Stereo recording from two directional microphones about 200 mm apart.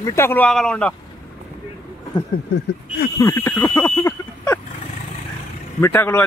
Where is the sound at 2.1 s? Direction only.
20° left (ahead or behind).